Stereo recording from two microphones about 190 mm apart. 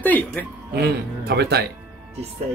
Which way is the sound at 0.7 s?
55° right (ahead or behind).